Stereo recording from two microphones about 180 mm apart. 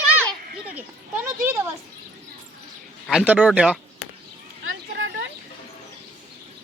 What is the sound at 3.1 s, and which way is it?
Speech, 5° right (ahead or behind).